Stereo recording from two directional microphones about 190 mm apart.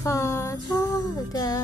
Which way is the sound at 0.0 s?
15° left (ahead or behind).